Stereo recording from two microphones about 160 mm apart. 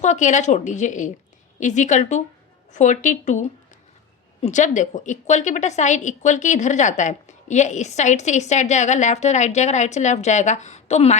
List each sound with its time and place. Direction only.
0.0 s a woman's voice: 50° left (ahead or behind)